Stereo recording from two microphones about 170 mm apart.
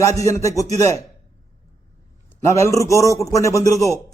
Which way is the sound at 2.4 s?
15° left (ahead or behind).